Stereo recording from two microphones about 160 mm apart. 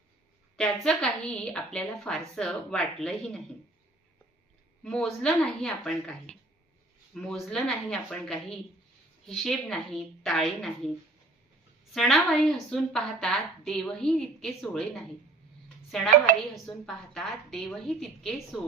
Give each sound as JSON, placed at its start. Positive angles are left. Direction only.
{"t": 0.5, "sound": "a woman's voice", "side_deg": 5}
{"t": 4.8, "sound": "a woman's voice", "side_deg": 5}
{"t": 11.9, "sound": "a woman's voice", "side_deg": 0}
{"t": 16.3, "sound": "speech", "side_deg": -55}
{"t": 16.6, "sound": "a woman's voice", "side_deg": 0}